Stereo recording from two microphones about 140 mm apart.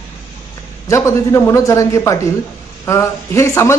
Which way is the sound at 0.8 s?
20° left (ahead or behind).